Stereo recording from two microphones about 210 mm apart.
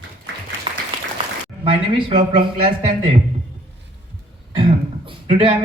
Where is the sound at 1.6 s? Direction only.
25° right (ahead or behind).